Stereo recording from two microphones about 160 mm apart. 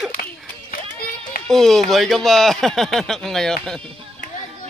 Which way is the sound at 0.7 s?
65° left (ahead or behind).